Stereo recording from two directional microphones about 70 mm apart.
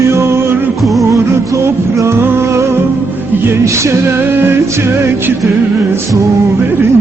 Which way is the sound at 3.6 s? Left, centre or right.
Right.